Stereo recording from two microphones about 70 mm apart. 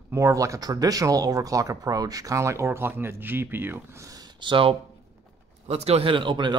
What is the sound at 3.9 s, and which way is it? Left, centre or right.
Speech, right.